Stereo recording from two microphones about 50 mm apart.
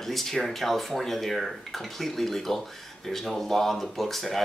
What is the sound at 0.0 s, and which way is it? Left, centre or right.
Speech, centre.